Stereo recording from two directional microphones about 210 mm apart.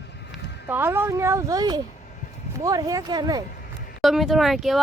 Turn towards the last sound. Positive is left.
turn(degrees=0)  # may be behind; listen again after turning